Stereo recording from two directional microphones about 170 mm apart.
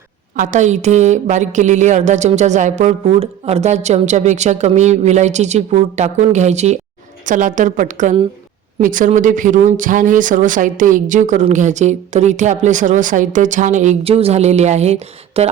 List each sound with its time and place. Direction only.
0.3 s speech: 50° right (ahead or behind)